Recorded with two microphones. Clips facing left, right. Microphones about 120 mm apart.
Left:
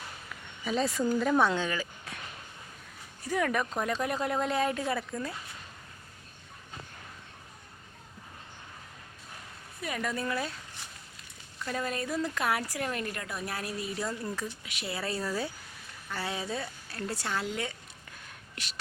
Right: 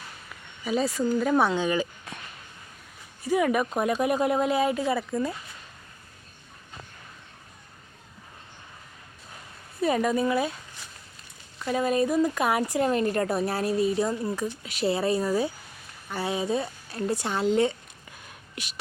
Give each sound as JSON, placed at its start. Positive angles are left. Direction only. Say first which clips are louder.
{"t": 0.6, "sound": "speech", "louder": "right 3 dB", "side_deg": -5}
{"t": 3.2, "sound": "speech", "louder": "right 6 dB", "side_deg": -10}
{"t": 9.8, "sound": "speech", "louder": "right 10 dB", "side_deg": -25}
{"t": 11.6, "sound": "speech", "louder": "right 9 dB", "side_deg": -15}
{"t": 14.6, "sound": "speech", "louder": "right 13 dB", "side_deg": -35}
{"t": 14.9, "sound": "speech", "louder": "right 6 dB", "side_deg": -20}
{"t": 18.5, "sound": "speech", "louder": "right 5 dB", "side_deg": -15}